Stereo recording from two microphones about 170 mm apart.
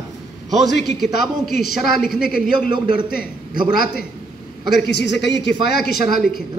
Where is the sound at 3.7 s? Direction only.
60° left (ahead or behind).